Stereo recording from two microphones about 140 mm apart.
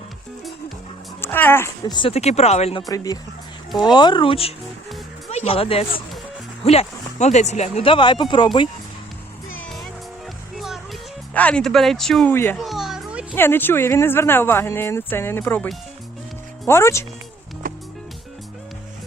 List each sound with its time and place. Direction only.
1.2 s speech: 15° left (ahead or behind)
1.9 s speech: 35° left (ahead or behind)
2.1 s speech: 50° left (ahead or behind)
2.8 s speech: 25° left (ahead or behind)
11.3 s speech: 10° left (ahead or behind)
12.3 s speech: 15° left (ahead or behind)
12.5 s children playing: centre (ahead or behind)
13.3 s speech: 15° left (ahead or behind)
17.6 s music: 90° right